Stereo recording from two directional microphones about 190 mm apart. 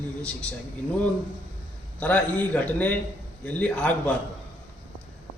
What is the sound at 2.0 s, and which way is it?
Speech, 5° left (ahead or behind).